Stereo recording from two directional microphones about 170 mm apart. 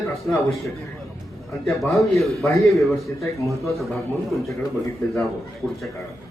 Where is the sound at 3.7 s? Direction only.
Centre (ahead or behind).